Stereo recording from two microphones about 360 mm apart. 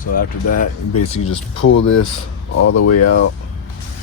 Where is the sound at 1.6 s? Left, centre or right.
Left.